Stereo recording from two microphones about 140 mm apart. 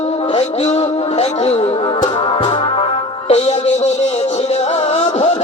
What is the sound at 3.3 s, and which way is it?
Music, 50° left (ahead or behind).